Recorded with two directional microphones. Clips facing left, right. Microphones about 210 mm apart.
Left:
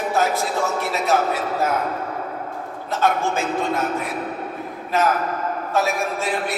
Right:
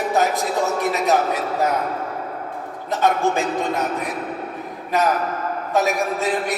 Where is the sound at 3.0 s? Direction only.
20° right (ahead or behind).